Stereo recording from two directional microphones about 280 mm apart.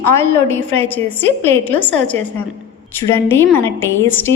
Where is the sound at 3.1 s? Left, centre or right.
Centre.